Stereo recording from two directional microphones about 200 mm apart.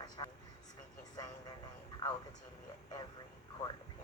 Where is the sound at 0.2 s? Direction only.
25° left (ahead or behind).